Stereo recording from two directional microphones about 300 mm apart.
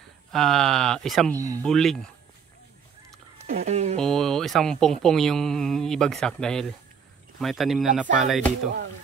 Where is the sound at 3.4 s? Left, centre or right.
Right.